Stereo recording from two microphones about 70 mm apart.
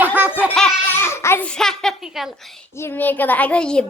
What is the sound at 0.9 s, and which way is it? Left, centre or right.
Speech, left.